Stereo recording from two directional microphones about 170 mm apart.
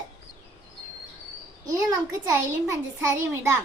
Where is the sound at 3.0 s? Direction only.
20° right (ahead or behind).